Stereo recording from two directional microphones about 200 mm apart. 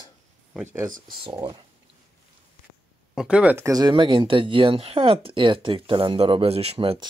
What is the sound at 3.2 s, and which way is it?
Speech, 5° right (ahead or behind).